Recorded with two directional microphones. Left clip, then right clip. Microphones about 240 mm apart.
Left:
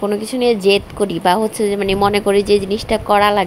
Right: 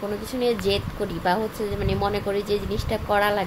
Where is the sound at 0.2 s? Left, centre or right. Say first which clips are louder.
Left 7 dB; left.